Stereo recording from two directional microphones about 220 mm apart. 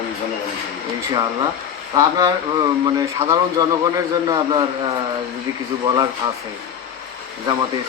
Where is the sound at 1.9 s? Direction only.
15° right (ahead or behind).